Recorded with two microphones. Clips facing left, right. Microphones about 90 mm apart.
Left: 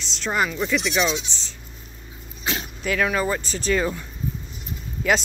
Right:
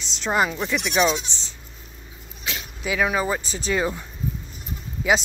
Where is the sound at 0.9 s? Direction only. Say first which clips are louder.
Right 2 dB; 45° right (ahead or behind).